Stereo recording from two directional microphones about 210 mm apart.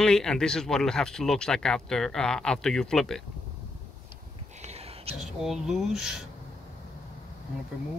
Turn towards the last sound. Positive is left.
turn(degrees=0)  # may be behind; listen again after turning